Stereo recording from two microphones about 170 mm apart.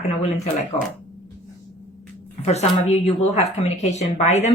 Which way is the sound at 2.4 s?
40° left (ahead or behind).